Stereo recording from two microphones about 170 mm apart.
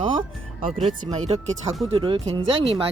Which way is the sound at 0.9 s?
40° right (ahead or behind).